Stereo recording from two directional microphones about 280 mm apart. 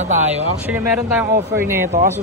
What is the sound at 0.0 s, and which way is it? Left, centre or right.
Speech, right.